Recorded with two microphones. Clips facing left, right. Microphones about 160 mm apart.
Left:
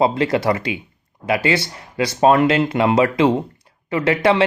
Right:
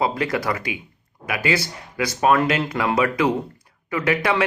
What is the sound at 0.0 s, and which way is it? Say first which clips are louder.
Speech: left 5 dB; 25° left (ahead or behind).